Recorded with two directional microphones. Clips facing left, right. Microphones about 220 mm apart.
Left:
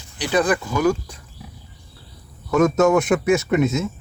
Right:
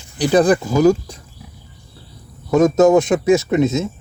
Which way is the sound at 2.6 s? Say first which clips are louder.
Right 4 dB; 20° right (ahead or behind).